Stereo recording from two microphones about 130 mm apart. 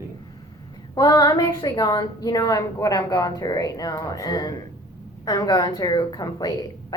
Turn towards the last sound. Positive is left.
turn(degrees=30)  # may be behind; listen again after turning